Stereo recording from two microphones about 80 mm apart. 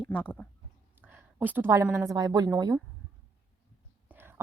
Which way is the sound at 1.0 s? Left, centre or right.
Right.